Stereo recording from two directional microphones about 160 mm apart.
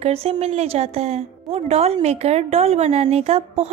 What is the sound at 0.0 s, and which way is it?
A woman's voice, 40° right (ahead or behind).